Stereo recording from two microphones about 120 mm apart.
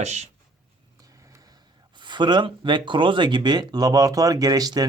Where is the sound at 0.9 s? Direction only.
30° right (ahead or behind).